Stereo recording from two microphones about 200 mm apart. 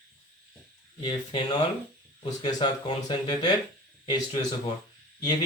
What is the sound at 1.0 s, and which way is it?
Speech, 20° left (ahead or behind).